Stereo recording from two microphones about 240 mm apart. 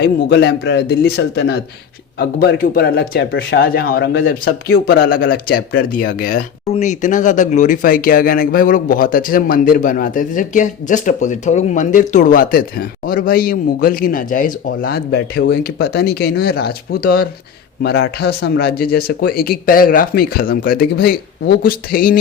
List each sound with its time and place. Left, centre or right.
0.0 s a man's voice: left